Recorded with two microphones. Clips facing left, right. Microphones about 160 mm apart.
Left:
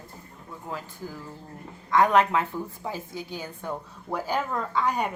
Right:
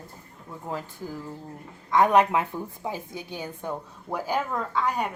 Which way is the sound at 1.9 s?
15° right (ahead or behind).